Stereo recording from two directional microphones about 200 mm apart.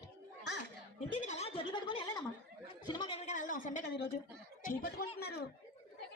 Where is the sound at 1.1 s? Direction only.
35° left (ahead or behind).